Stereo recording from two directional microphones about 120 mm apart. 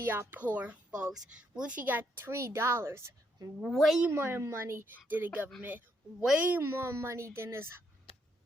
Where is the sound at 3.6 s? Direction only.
Centre (ahead or behind).